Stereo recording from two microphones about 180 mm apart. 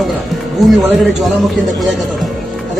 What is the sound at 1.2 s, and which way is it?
Speech, centre (ahead or behind).